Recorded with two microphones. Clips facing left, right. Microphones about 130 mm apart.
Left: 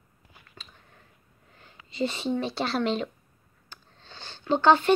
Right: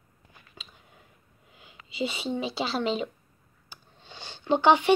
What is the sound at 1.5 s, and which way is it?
Speech, 5° right (ahead or behind).